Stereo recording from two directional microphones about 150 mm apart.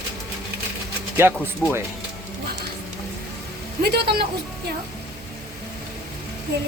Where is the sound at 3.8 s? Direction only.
90° right.